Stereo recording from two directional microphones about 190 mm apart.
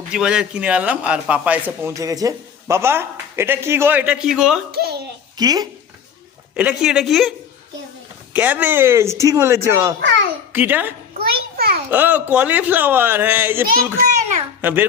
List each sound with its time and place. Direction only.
0.1 s a man's voice: 5° right (ahead or behind)
4.7 s a sound: 55° right (ahead or behind)
5.4 s speech: 20° right (ahead or behind)
6.6 s a woman's voice: 5° right (ahead or behind)
10.0 s a child's voice: 70° right (ahead or behind)
10.5 s a man's voice: 10° right (ahead or behind)
11.2 s a sound: 55° right (ahead or behind)
11.9 s a man's voice: 10° right (ahead or behind)